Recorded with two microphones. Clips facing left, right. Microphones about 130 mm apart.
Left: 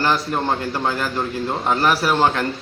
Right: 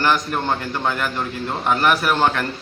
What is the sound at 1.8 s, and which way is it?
Speech, 30° left (ahead or behind).